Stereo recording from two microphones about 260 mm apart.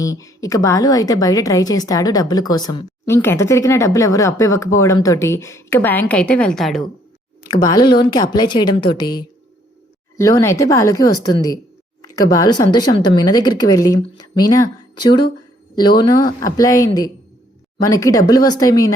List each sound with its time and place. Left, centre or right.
0.0 s a woman's voice: centre
7.4 s a woman's voice: centre